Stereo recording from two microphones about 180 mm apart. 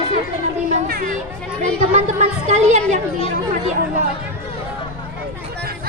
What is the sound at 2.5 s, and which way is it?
Speech, 40° right (ahead or behind).